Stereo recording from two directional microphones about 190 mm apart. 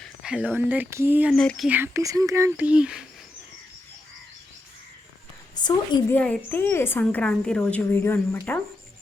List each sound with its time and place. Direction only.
0.0 s speech: 5° right (ahead or behind)
1.3 s speech: centre (ahead or behind)
5.5 s a woman's voice: 20° left (ahead or behind)
6.1 s a woman's voice: 5° left (ahead or behind)